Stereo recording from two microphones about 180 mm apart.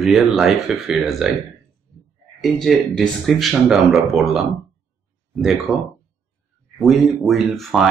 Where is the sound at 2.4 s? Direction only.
Centre (ahead or behind).